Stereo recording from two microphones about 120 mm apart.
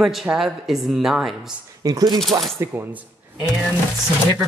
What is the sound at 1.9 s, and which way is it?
Speech, 30° right (ahead or behind).